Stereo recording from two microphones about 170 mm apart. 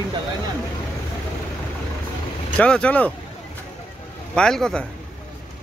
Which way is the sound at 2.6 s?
5° left (ahead or behind).